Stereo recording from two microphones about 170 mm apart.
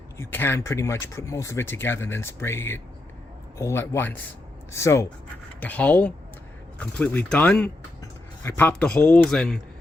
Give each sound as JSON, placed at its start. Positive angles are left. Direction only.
{"t": 0.2, "sound": "a man's voice", "side_deg": 15}